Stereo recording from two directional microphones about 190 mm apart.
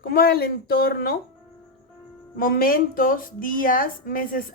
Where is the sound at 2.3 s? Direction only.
50° left (ahead or behind).